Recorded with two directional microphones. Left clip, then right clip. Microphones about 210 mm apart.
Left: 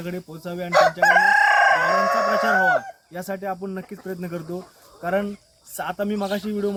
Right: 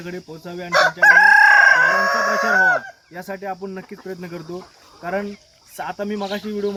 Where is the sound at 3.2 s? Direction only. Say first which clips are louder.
Even; 5° left (ahead or behind).